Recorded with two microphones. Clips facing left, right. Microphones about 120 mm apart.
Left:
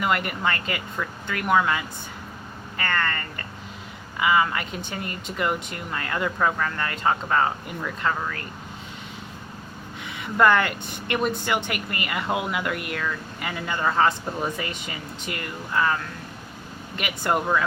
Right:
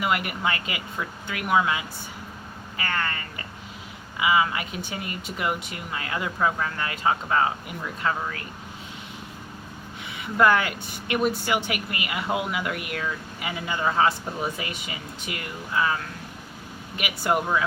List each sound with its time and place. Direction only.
0.0 s speech: 5° right (ahead or behind)
10.1 s a woman's voice: 5° right (ahead or behind)